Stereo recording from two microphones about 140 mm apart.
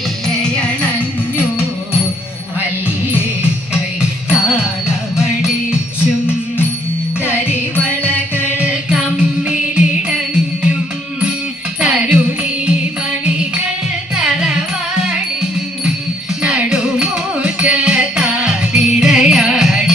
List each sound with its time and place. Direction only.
0.3 s music: 5° left (ahead or behind)
5.1 s music: 20° left (ahead or behind)
7.2 s music: 15° left (ahead or behind)
8.5 s music: 10° right (ahead or behind)
11.8 s music: 10° right (ahead or behind)
16.4 s music: 10° right (ahead or behind)